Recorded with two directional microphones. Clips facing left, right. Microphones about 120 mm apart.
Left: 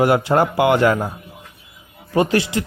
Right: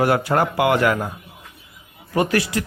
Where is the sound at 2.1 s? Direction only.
25° left (ahead or behind).